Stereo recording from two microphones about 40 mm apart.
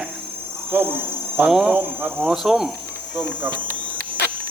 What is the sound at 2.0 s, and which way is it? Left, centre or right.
Speech, right.